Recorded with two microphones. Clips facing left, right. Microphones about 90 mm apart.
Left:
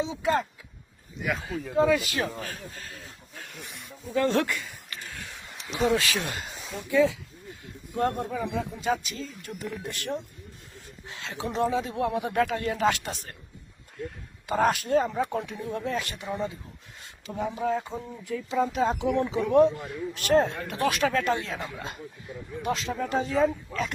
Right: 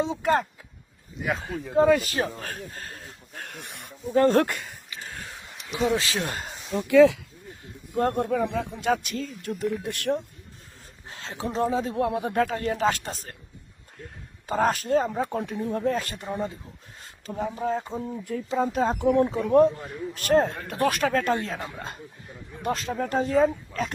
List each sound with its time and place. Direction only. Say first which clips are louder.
0.0 s speech: right 3 dB; 50° right (ahead or behind)
1.2 s speech: right 2 dB; 30° right (ahead or behind)
1.7 s speech: right 3 dB; 45° right (ahead or behind); by 3.9 s 60° right (ahead or behind)
4.1 s speech: right 5 dB; 40° right (ahead or behind)
4.9 s a sound: right 3 dB; 40° right (ahead or behind)
5.5 s a sound: left 1 dB; centre (ahead or behind)
5.9 s speech: even; 30° right (ahead or behind)
6.7 s speech: right 7 dB; 75° right (ahead or behind)
7.6 s a sound: right 2 dB; 35° right (ahead or behind)
8.2 s speech: right 5 dB; 55° right (ahead or behind)
11.0 s speech: right 1 dB; 35° right (ahead or behind)
14.4 s speech: even; 35° right (ahead or behind)
17.0 s a sound: right 2 dB; 40° right (ahead or behind)
17.6 s speech: even; 35° right (ahead or behind)